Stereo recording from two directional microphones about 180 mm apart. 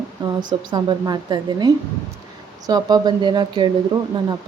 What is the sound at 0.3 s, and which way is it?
A woman's voice, 25° right (ahead or behind).